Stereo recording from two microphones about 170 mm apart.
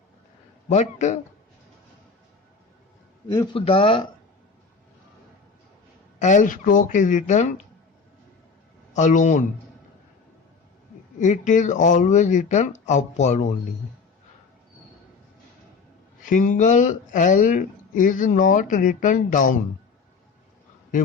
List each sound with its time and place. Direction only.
0.7 s speech: 45° left (ahead or behind)
3.2 s speech: 25° left (ahead or behind)
6.1 s speech: 45° left (ahead or behind)
8.9 s speech: 45° left (ahead or behind)
11.2 s speech: 45° left (ahead or behind)
16.2 s speech: 50° left (ahead or behind)